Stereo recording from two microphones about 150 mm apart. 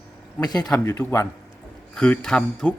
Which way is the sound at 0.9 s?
15° left (ahead or behind).